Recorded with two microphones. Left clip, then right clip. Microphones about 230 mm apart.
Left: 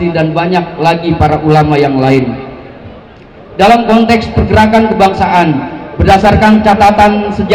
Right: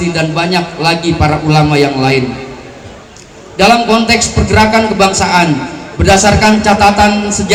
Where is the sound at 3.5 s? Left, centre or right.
Right.